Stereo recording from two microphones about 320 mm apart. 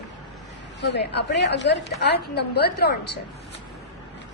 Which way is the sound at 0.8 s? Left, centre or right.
Left.